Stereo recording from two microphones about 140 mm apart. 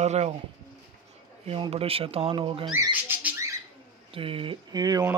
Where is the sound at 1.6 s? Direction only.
45° right (ahead or behind).